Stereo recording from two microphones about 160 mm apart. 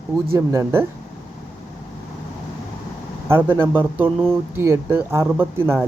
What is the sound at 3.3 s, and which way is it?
Speech, 15° right (ahead or behind).